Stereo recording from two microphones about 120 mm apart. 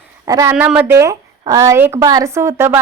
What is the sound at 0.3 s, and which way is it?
Speech, 30° right (ahead or behind).